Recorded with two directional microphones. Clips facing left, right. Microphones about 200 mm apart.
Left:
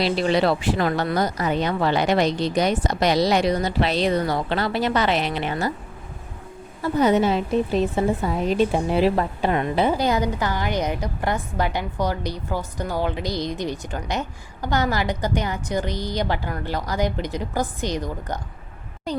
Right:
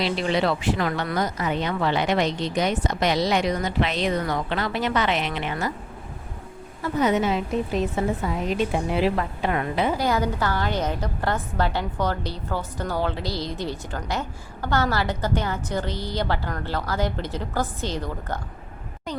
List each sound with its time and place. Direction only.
0.0 s speech: 35° left (ahead or behind)
6.8 s speech: 30° left (ahead or behind)
10.1 s a woman's voice: 15° left (ahead or behind)